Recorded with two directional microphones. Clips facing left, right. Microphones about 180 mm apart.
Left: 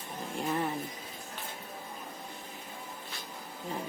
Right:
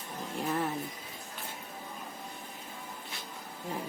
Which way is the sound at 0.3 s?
Centre (ahead or behind).